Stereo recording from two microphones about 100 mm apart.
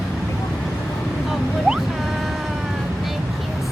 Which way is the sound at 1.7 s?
5° right (ahead or behind).